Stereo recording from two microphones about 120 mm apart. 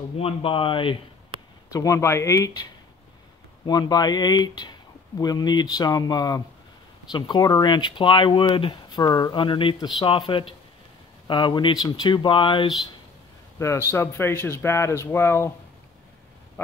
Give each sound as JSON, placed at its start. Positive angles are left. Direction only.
{"t": 0.2, "sound": "speech", "side_deg": 50}
{"t": 1.7, "sound": "speech", "side_deg": 30}
{"t": 3.6, "sound": "speech", "side_deg": 35}
{"t": 13.6, "sound": "speech", "side_deg": 25}
{"t": 16.6, "sound": "speech", "side_deg": 20}